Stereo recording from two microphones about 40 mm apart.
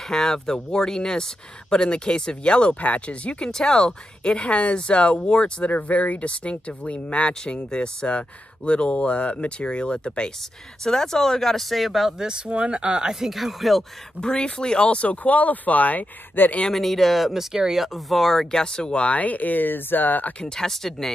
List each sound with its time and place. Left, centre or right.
0.1 s speech: centre; by 13.1 s right
13.1 s speech: centre
14.2 s speech: left
16.4 s speech: left
16.7 s speech: centre
18.1 s speech: centre
18.5 s speech: centre
19.1 s speech: left
20.3 s speech: centre